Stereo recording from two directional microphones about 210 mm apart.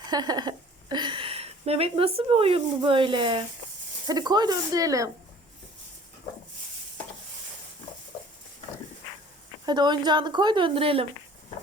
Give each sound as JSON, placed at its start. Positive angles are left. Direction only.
{"t": 0.0, "sound": "a woman's voice", "side_deg": -20}
{"t": 9.6, "sound": "a woman's voice", "side_deg": -20}